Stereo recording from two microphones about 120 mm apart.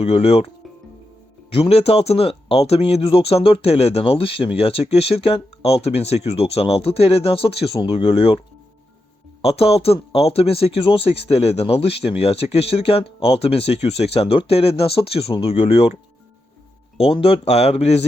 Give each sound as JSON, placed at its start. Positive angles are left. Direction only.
{"t": 0.0, "sound": "speech", "side_deg": 55}
{"t": 9.4, "sound": "speech", "side_deg": 55}
{"t": 17.0, "sound": "speech", "side_deg": 50}